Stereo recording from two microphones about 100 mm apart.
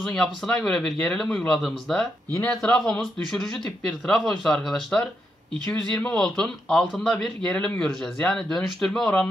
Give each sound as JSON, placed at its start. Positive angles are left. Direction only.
{"t": 0.0, "sound": "speech", "side_deg": 5}
{"t": 5.7, "sound": "speech", "side_deg": 20}
{"t": 6.1, "sound": "speech", "side_deg": 5}